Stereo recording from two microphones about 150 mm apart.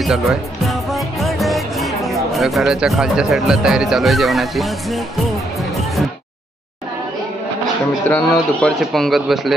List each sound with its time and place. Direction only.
0.0 s speech: centre (ahead or behind)
8.1 s speech: 5° left (ahead or behind)